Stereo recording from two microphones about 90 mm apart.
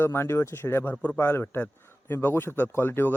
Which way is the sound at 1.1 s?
25° left (ahead or behind).